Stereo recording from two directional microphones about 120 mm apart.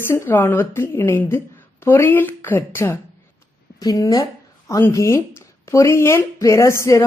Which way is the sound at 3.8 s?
30° left (ahead or behind).